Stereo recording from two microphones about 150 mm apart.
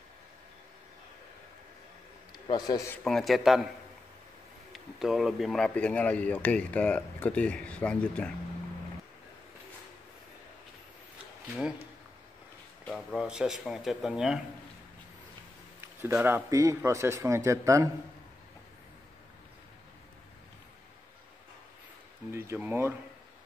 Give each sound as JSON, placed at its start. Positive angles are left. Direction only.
{"t": 2.3, "sound": "a man's voice", "side_deg": 30}
{"t": 3.0, "sound": "speech", "side_deg": 5}
{"t": 4.7, "sound": "speech", "side_deg": 0}
{"t": 12.8, "sound": "speech", "side_deg": 0}
{"t": 15.8, "sound": "a man's voice", "side_deg": -15}
{"t": 22.3, "sound": "speech", "side_deg": -15}